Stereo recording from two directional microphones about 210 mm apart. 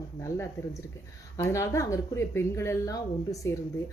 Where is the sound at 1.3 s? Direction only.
15° left (ahead or behind).